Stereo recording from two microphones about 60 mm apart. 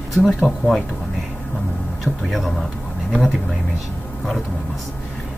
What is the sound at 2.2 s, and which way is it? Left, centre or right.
Speech, centre.